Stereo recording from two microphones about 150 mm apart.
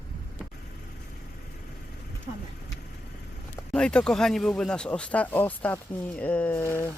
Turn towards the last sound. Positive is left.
turn(degrees=15)  # may be behind; listen again after turning